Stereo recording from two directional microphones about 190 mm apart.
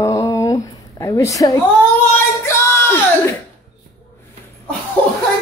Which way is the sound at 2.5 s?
15° left (ahead or behind).